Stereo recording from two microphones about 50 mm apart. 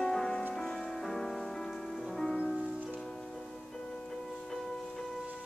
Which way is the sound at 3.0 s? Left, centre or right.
Centre.